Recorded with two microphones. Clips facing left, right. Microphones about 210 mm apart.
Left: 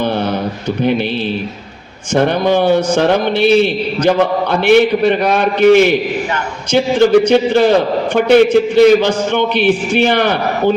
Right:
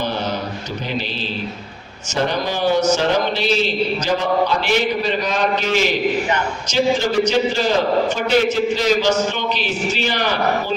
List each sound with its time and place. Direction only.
2.1 s a man's voice: 55° left (ahead or behind)